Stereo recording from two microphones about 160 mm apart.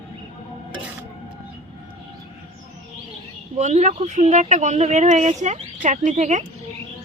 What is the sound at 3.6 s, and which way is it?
A woman's voice, 45° right (ahead or behind).